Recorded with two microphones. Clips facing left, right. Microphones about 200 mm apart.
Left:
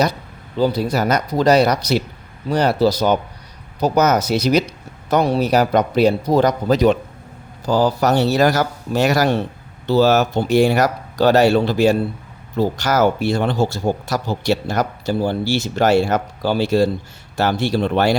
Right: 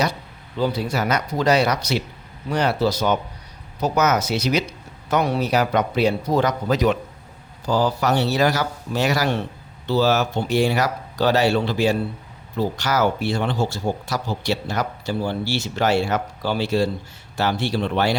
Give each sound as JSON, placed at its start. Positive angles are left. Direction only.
{"t": 0.6, "sound": "a man's voice", "side_deg": 40}